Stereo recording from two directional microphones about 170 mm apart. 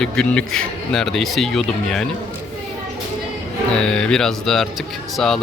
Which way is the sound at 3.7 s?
5° left (ahead or behind).